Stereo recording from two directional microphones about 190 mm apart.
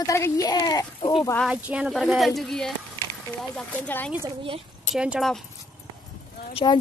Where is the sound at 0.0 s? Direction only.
15° left (ahead or behind).